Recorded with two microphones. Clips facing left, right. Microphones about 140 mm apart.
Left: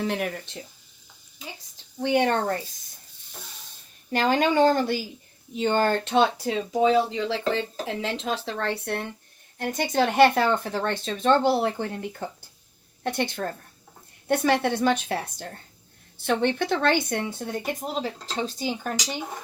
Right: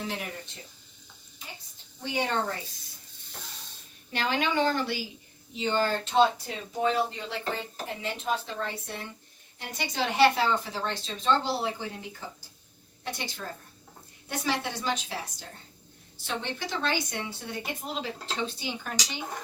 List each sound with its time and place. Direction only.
0.1 s speech: 65° left (ahead or behind)
2.0 s speech: 65° left (ahead or behind)
4.1 s speech: 45° left (ahead or behind); by 9.0 s 65° left (ahead or behind)
9.6 s speech: 50° left (ahead or behind)